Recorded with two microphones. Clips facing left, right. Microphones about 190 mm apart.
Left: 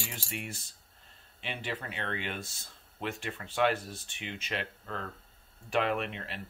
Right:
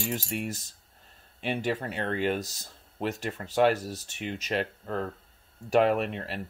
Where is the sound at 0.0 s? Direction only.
45° right (ahead or behind).